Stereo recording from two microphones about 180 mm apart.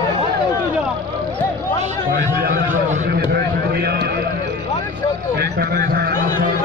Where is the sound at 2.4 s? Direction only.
50° right (ahead or behind).